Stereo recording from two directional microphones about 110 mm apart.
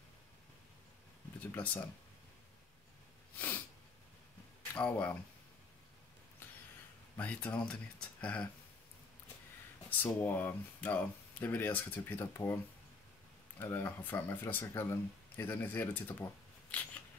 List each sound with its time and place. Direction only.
1.5 s speech: 15° left (ahead or behind)
3.3 s sneeze: 15° left (ahead or behind)
4.7 s speech: 10° left (ahead or behind)
7.2 s speech: 15° left (ahead or behind)
9.8 s speech: 15° left (ahead or behind)
13.6 s speech: 20° left (ahead or behind)